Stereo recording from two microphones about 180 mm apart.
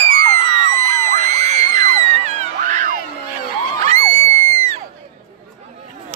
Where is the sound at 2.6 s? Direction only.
45° right (ahead or behind).